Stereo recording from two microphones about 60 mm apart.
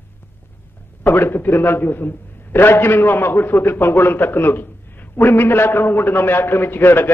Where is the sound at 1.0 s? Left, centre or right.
Left.